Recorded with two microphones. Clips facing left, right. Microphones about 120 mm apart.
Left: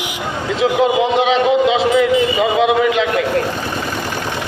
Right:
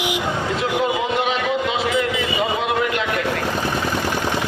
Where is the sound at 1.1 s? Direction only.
90° left.